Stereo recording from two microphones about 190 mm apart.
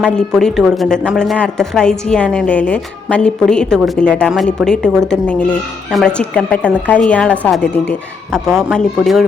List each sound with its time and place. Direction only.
0.0 s speech: centre (ahead or behind)